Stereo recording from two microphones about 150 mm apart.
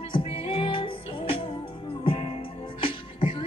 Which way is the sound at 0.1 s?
40° left (ahead or behind).